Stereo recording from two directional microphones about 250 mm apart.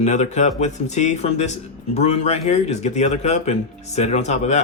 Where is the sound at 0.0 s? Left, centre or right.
Left.